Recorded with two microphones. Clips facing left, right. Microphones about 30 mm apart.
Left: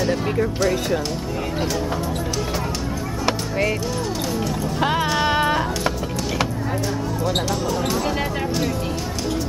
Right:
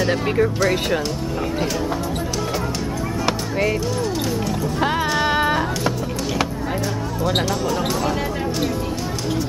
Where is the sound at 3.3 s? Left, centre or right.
Centre.